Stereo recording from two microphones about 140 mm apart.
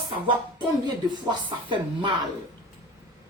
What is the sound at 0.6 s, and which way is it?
Speech, 30° right (ahead or behind).